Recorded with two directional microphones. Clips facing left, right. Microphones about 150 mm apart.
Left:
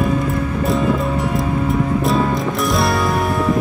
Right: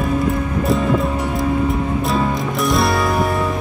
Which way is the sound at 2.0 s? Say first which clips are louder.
Left 2 dB; centre (ahead or behind).